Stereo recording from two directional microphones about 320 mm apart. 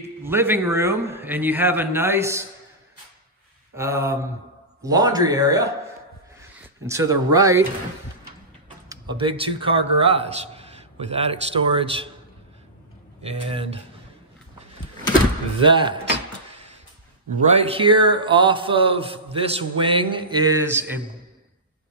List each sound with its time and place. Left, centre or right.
0.2 s speech: centre
3.7 s speech: centre
6.9 s speech: centre
8.8 s speech: centre
13.2 s speech: centre
15.6 s a sound: centre
17.4 s speech: centre